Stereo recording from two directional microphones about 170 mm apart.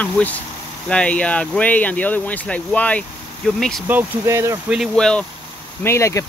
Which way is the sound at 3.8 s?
15° right (ahead or behind).